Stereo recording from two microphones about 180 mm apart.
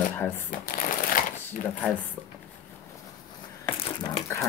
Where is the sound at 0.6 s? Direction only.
50° left (ahead or behind).